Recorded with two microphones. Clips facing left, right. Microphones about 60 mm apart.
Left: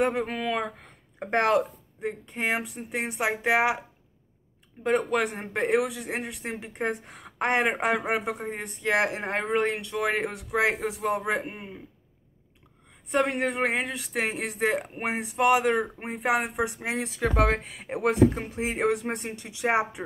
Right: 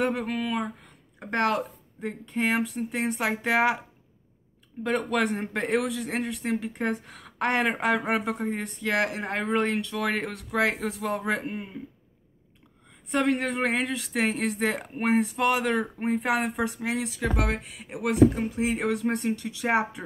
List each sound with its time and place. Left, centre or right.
0.0 s a woman's voice: left
0.4 s speech: left
1.2 s a woman's voice: left
2.0 s speech: centre
4.9 s speech: centre
6.5 s a woman's voice: left
8.0 s a woman's voice: centre; by 9.5 s left
9.5 s speech: centre
13.2 s speech: centre
16.8 s speech: left